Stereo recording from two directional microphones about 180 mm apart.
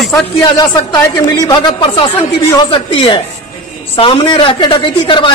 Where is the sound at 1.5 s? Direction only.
30° left (ahead or behind).